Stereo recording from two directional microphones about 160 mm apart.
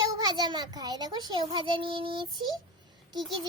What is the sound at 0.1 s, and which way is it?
A child's voice, 25° right (ahead or behind).